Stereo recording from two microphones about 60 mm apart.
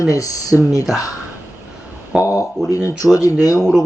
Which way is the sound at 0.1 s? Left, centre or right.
Left.